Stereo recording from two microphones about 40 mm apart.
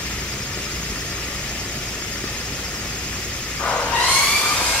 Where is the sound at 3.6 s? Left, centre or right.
Left.